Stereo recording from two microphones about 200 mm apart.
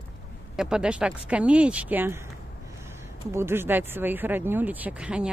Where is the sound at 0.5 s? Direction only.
5° right (ahead or behind).